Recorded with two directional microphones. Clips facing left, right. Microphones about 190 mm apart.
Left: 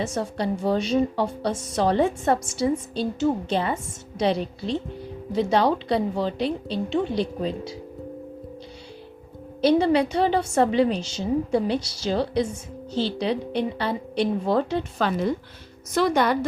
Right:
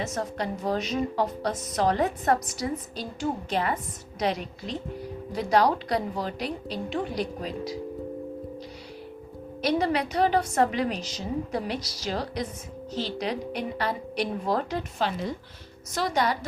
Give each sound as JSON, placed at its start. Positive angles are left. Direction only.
{"t": 0.0, "sound": "a woman's voice", "side_deg": 30}
{"t": 9.6, "sound": "a woman's voice", "side_deg": 30}
{"t": 14.9, "sound": "a woman's voice", "side_deg": 45}